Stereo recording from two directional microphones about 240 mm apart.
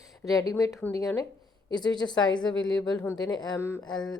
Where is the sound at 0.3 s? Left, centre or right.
Centre.